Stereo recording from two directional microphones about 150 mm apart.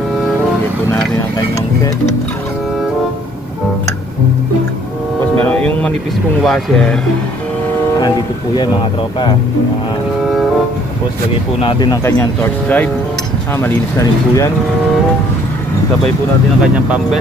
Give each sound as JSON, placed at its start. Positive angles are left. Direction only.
{"t": 5.4, "sound": "music", "side_deg": 10}
{"t": 6.4, "sound": "speech", "side_deg": 5}
{"t": 11.6, "sound": "speech", "side_deg": 30}
{"t": 12.0, "sound": "speech", "side_deg": 15}
{"t": 16.7, "sound": "speech", "side_deg": -10}